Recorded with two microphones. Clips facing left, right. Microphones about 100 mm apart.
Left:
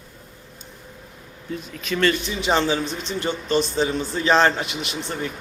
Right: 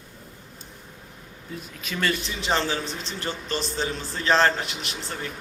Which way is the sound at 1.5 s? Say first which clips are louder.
Left 7 dB; 5° right (ahead or behind).